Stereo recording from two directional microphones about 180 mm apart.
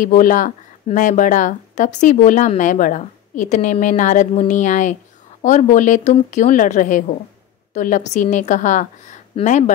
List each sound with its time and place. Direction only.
0.0 s speech: 45° left (ahead or behind)